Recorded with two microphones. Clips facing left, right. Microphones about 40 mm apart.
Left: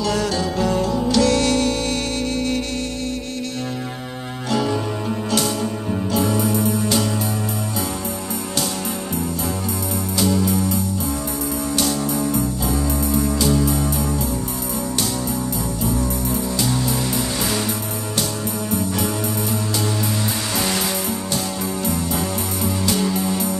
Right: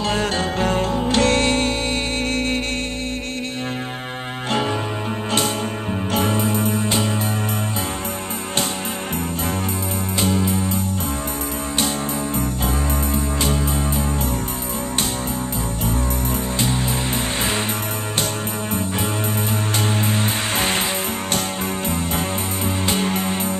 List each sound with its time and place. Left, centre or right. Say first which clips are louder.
0.0 s music: even; right
4.5 s music: left 1 dB; right
10.2 s music: left 2 dB; right
11.8 s music: left 1 dB; right
22.8 s music: left 1 dB; right